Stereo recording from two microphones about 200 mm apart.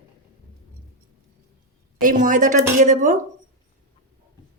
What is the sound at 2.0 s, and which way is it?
A woman's voice, 40° right (ahead or behind).